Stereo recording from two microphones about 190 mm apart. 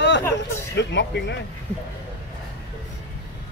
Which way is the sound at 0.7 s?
65° left (ahead or behind).